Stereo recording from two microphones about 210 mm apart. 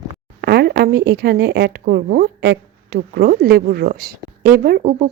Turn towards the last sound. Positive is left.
turn(degrees=-40)  # may be behind; listen again after turning